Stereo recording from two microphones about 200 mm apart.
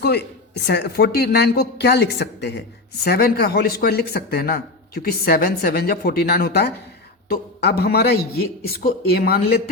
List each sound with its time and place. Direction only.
0.0 s speech: 55° left (ahead or behind)